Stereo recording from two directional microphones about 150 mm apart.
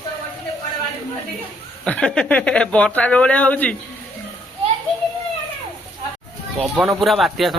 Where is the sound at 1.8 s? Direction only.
5° left (ahead or behind).